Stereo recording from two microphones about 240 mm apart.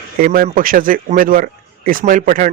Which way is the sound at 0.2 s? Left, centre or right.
Right.